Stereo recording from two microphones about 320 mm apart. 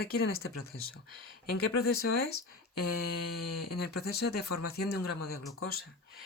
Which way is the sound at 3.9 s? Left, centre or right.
Left.